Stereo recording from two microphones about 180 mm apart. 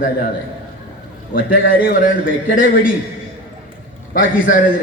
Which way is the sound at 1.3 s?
55° left (ahead or behind).